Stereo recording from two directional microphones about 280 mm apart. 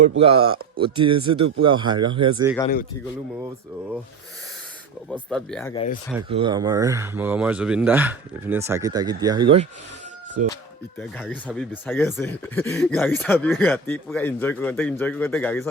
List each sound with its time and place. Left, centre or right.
0.2 s speech: centre
5.0 s speech: centre
5.7 s speech: left
6.1 s speech: centre
11.2 s speech: centre